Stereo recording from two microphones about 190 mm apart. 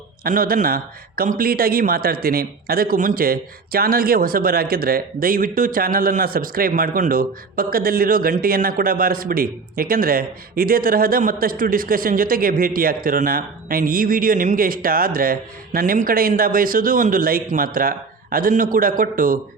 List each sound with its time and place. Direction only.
0.3 s speech: 50° right (ahead or behind)